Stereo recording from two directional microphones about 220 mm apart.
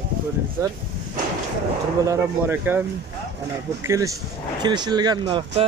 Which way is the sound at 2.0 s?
10° right (ahead or behind).